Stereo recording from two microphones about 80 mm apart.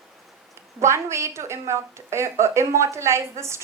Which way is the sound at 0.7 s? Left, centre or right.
Right.